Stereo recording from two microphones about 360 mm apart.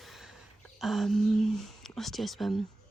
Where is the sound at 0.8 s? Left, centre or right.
Centre.